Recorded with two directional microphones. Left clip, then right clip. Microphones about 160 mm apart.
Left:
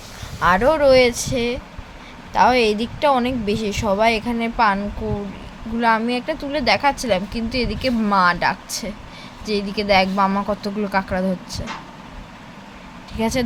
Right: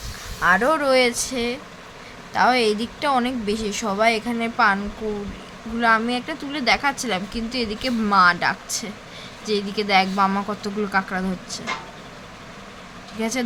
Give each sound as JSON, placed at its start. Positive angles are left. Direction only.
{"t": 0.3, "sound": "speech", "side_deg": 25}
{"t": 0.6, "sound": "speech", "side_deg": 10}
{"t": 5.8, "sound": "speech", "side_deg": 15}
{"t": 13.1, "sound": "speech", "side_deg": 25}